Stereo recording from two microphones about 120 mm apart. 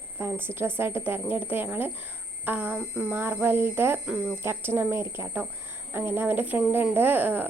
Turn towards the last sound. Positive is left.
turn(degrees=-15)  # may be behind; listen again after turning